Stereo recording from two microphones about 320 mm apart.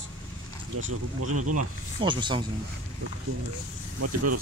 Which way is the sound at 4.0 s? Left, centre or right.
Right.